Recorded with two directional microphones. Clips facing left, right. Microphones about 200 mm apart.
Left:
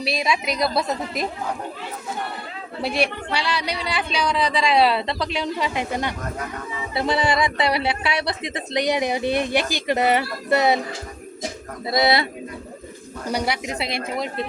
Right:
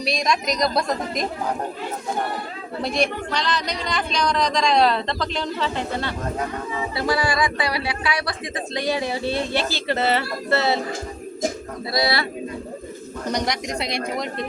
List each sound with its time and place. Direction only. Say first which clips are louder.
0.0 s a woman's voice: right 1 dB; 5° left (ahead or behind)
2.8 s speech: even; 10° left (ahead or behind)
11.9 s speech: left 3 dB; 20° left (ahead or behind)
13.2 s a woman's voice: even; 10° left (ahead or behind)